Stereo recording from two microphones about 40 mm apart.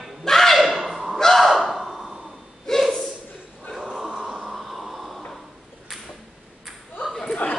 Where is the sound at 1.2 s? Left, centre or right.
Centre.